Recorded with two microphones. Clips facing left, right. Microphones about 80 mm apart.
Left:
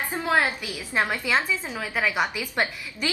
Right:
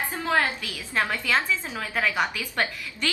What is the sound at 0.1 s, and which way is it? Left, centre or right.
A woman's voice, centre.